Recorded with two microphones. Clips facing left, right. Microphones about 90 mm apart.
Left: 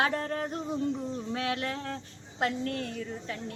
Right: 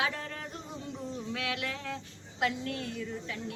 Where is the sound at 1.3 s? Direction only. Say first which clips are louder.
Left 4 dB; 35° left (ahead or behind).